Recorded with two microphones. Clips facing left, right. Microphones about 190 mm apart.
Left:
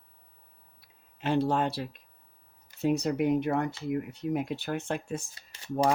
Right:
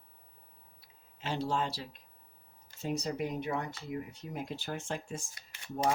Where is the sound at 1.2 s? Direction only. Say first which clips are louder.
Left 7 dB; 55° left (ahead or behind).